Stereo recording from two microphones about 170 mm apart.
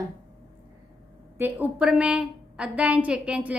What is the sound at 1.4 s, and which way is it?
A woman's voice, 10° right (ahead or behind).